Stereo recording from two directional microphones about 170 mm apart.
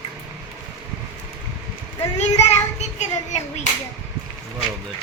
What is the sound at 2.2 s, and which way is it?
Child singing, 40° left (ahead or behind).